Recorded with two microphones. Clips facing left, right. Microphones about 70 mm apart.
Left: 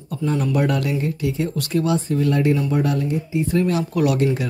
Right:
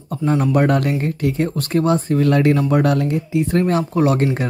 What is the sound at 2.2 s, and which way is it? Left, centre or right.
Speech, right.